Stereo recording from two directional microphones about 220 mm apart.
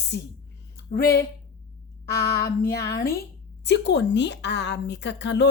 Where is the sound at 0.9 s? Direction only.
40° left (ahead or behind).